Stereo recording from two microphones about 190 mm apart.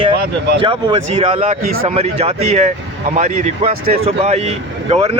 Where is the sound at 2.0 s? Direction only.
35° right (ahead or behind).